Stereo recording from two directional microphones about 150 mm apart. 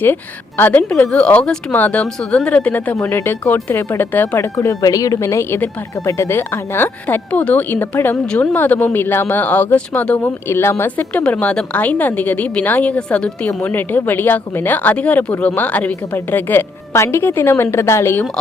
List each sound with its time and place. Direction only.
0.0 s speech: 15° left (ahead or behind)